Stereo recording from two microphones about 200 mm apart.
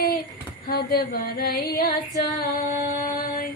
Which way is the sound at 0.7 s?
50° left (ahead or behind).